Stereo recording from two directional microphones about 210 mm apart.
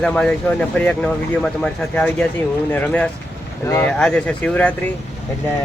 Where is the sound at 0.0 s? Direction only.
5° left (ahead or behind).